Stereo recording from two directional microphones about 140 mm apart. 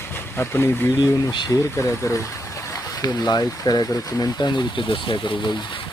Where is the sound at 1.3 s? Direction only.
35° left (ahead or behind).